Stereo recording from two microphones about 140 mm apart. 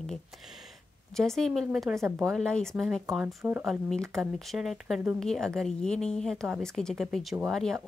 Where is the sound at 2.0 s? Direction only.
15° right (ahead or behind).